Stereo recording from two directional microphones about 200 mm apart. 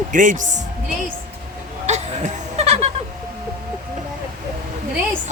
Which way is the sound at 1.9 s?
35° right (ahead or behind).